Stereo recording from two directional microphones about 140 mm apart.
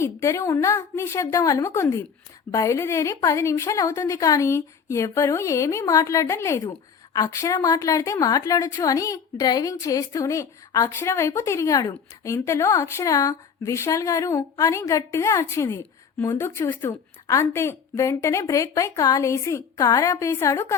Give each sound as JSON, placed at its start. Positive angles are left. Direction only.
{"t": 0.0, "sound": "a woman's voice", "side_deg": 20}